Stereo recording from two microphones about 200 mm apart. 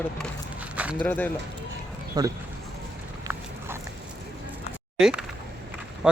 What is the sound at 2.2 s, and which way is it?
Speech, 20° right (ahead or behind).